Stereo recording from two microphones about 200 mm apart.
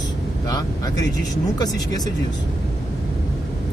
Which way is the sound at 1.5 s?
20° left (ahead or behind).